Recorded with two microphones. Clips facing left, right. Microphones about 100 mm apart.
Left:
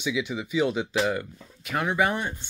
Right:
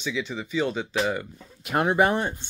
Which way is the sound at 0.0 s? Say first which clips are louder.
Left 2 dB; 10° left (ahead or behind).